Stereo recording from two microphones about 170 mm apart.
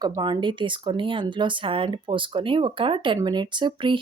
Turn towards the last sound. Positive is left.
turn(degrees=-30)  # may be behind; listen again after turning